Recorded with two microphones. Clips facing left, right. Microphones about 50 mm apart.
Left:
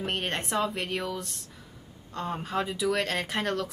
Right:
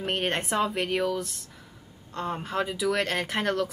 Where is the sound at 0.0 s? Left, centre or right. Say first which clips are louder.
Right 3 dB; centre.